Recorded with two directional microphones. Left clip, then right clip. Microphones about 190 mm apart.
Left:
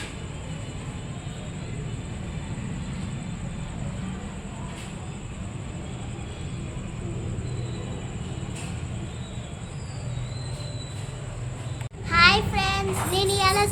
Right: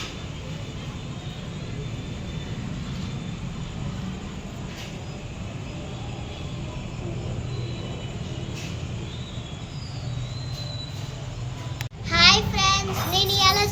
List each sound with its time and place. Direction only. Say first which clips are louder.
12.0 s child singing: right 1 dB; 20° left (ahead or behind)